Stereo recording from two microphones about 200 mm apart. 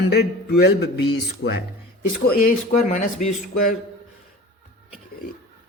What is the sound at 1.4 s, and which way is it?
Speech, 65° left (ahead or behind).